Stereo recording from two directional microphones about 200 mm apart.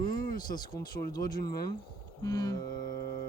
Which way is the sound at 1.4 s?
20° left (ahead or behind).